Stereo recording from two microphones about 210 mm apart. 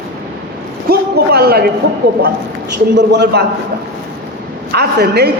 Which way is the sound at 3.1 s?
50° right (ahead or behind).